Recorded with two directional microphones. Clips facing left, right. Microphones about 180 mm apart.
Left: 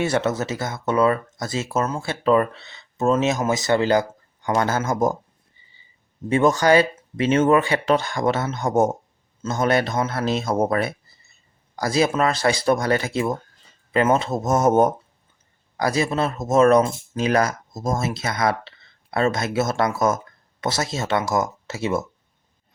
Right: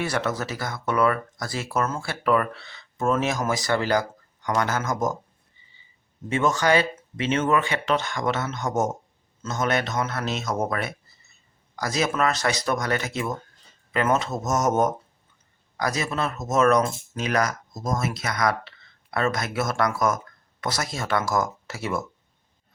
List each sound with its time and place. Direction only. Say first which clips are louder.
0.0 s speech: left 5 dB; 25° left (ahead or behind)
6.2 s speech: left 5 dB; 35° left (ahead or behind)